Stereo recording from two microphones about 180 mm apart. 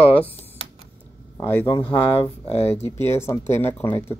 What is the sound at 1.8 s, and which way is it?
Speech, 30° left (ahead or behind).